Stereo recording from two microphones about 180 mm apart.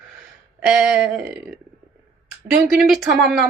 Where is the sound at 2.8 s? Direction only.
Centre (ahead or behind).